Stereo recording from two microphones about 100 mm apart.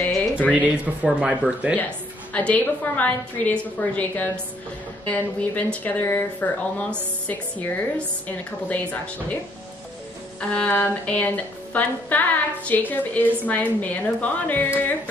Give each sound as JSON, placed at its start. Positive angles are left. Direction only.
{"t": 0.0, "sound": "a sound", "side_deg": 20}
{"t": 0.5, "sound": "speech", "side_deg": -10}
{"t": 2.3, "sound": "speech", "side_deg": 15}
{"t": 5.5, "sound": "speech", "side_deg": 15}
{"t": 10.5, "sound": "speech", "side_deg": 15}